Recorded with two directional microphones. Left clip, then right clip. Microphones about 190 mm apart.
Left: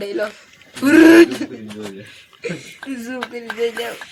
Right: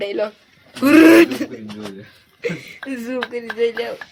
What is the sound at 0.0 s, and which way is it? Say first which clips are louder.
Speech: right 1 dB; 30° right (ahead or behind).